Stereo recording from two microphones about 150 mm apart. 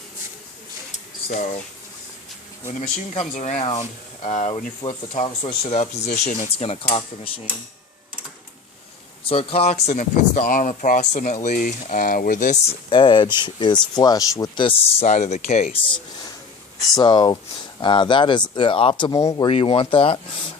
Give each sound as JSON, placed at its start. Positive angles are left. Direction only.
{"t": 3.2, "sound": "speech", "side_deg": 55}
{"t": 4.8, "sound": "speech", "side_deg": 25}
{"t": 5.2, "sound": "speech", "side_deg": 35}
{"t": 9.3, "sound": "speech", "side_deg": 40}
{"t": 12.6, "sound": "speech", "side_deg": 35}
{"t": 15.0, "sound": "speech", "side_deg": 55}
{"t": 16.9, "sound": "speech", "side_deg": 30}
{"t": 19.5, "sound": "speech", "side_deg": 35}